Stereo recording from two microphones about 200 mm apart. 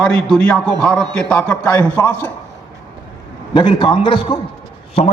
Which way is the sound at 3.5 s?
25° left (ahead or behind).